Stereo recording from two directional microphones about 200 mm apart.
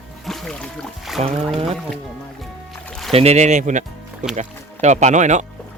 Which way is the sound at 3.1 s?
30° right (ahead or behind).